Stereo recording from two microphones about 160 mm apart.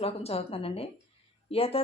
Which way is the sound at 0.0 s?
40° left (ahead or behind).